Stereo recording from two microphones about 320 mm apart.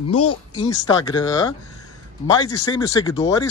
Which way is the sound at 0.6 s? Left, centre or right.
Centre.